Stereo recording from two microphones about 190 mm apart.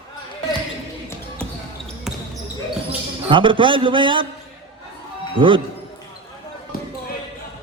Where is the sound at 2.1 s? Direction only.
Centre (ahead or behind).